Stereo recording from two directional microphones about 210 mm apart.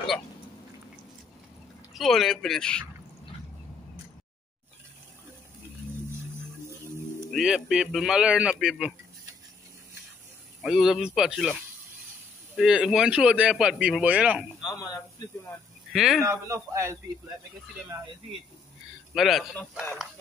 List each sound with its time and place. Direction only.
2.0 s speech: centre (ahead or behind)
7.2 s speech: centre (ahead or behind)
10.6 s speech: centre (ahead or behind)
12.5 s speech: centre (ahead or behind)
14.7 s speech: 15° left (ahead or behind)
15.9 s speech: centre (ahead or behind)
16.3 s a man's voice: 15° right (ahead or behind)
19.1 s speech: centre (ahead or behind)